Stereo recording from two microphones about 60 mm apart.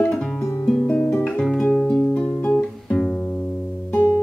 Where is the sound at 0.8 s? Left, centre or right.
Left.